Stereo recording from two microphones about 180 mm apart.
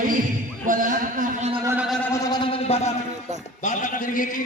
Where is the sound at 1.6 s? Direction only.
10° right (ahead or behind).